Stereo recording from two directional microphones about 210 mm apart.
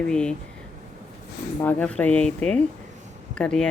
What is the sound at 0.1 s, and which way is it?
Speech, 5° left (ahead or behind).